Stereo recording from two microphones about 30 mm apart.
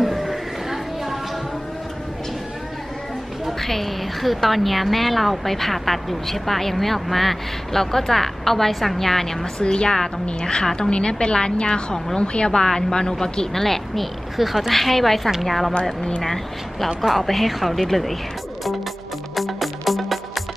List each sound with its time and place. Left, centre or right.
0.0 s a sound: centre
3.6 s a woman's voice: centre
9.6 s a woman's voice: left; by 14.0 s centre
14.3 s a woman's voice: centre
14.7 s a woman's voice: centre
17.1 s a woman's voice: centre
19.3 s music: centre